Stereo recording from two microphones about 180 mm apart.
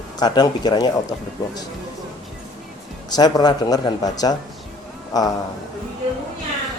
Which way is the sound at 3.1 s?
20° left (ahead or behind).